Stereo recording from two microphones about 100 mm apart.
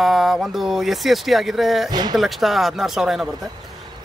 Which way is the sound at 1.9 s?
45° right (ahead or behind).